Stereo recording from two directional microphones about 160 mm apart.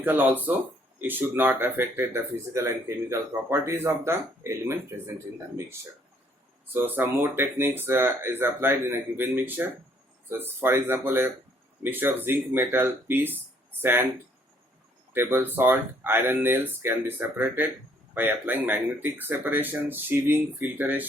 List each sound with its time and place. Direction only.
0.0 s speech: 10° right (ahead or behind)
6.7 s speech: 15° right (ahead or behind)
15.1 s speech: 15° right (ahead or behind)